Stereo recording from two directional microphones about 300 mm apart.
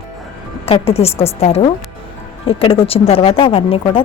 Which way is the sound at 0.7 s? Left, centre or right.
Centre.